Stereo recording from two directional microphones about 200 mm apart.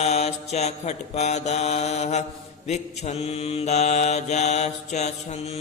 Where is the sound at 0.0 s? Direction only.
30° left (ahead or behind).